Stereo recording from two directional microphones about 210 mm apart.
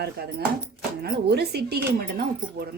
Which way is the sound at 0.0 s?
50° right (ahead or behind).